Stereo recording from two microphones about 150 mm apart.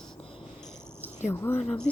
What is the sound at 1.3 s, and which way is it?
Speech, 15° left (ahead or behind).